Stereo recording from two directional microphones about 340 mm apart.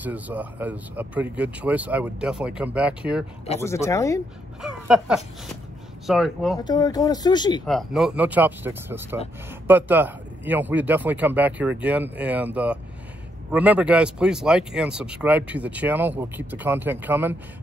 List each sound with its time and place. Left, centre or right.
0.0 s speech: centre
3.6 s speech: centre
4.6 s speech: centre
6.6 s speech: centre
7.6 s speech: centre